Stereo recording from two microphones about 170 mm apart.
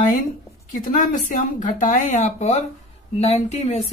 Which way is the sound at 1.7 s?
45° left (ahead or behind).